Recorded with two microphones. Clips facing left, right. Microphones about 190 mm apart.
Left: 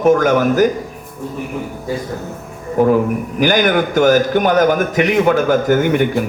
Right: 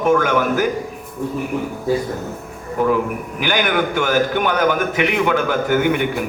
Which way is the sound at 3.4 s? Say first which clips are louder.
Left 5 dB; 40° left (ahead or behind).